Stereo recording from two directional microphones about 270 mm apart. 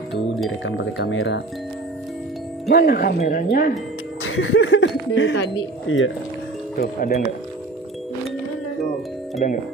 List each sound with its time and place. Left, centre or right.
0.7 s speech: left
2.7 s speech: left
4.2 s speech: left
6.8 s speech: left
9.4 s speech: left